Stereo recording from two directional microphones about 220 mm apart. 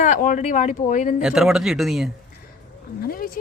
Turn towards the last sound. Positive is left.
turn(degrees=40)  # may be behind; listen again after turning